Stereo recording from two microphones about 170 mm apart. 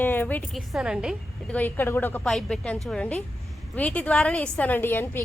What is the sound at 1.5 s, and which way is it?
A woman's voice, 10° left (ahead or behind).